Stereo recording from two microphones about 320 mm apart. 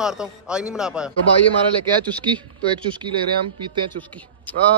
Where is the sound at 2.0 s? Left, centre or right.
Centre.